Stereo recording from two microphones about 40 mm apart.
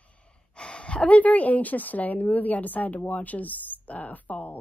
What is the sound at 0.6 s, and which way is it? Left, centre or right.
Speech, left.